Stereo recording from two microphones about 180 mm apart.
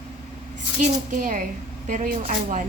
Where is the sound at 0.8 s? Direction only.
45° right (ahead or behind).